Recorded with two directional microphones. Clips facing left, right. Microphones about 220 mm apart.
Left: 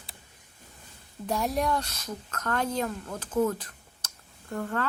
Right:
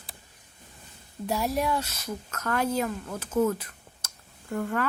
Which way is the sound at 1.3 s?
5° right (ahead or behind).